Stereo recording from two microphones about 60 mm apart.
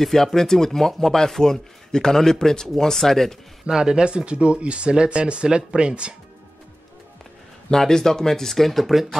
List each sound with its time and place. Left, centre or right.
0.0 s speech: centre
3.6 s speech: centre
7.7 s speech: centre